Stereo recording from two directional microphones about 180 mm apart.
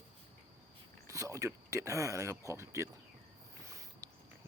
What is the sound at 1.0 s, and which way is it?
Speech, 15° right (ahead or behind).